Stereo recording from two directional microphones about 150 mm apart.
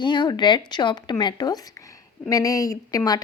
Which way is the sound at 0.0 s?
30° left (ahead or behind).